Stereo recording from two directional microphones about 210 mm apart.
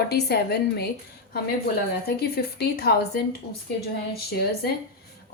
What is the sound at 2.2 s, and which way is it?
A woman's voice, 50° left (ahead or behind).